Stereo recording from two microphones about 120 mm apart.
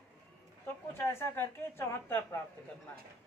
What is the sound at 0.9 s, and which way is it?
A woman's voice, 20° left (ahead or behind).